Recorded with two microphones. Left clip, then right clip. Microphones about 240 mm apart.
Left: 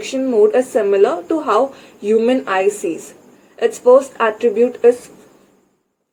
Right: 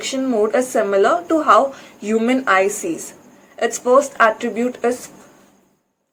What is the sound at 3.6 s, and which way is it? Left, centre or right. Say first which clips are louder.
Speech: left 3 dB; right.